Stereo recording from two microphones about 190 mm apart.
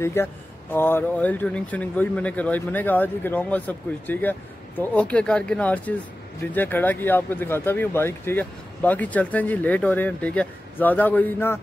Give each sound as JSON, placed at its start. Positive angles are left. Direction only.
{"t": 0.0, "sound": "speech", "side_deg": 15}